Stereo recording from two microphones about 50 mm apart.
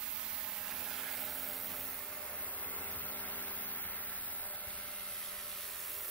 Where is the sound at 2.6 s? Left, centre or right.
Left.